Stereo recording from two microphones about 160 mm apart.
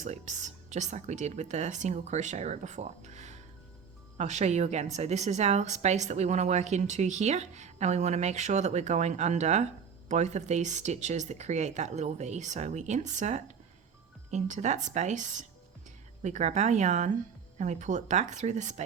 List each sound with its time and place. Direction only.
0.0 s a woman's voice: 45° right (ahead or behind)